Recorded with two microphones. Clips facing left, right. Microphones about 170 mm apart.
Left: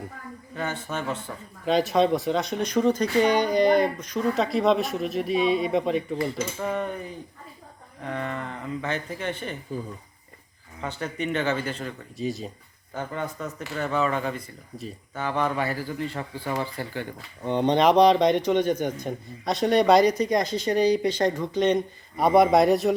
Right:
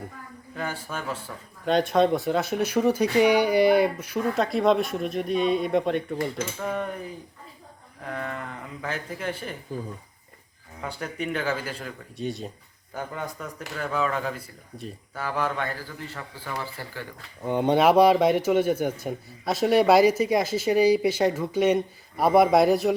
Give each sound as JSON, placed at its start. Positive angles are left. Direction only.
{"t": 0.5, "sound": "speech", "side_deg": -5}
{"t": 8.0, "sound": "speech", "side_deg": 0}
{"t": 10.8, "sound": "speech", "side_deg": -5}
{"t": 17.4, "sound": "speech", "side_deg": -10}